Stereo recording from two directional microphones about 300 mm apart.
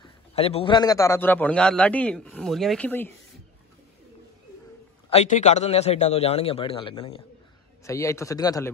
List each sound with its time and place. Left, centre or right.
0.0 s a man's voice: centre
5.1 s a man's voice: left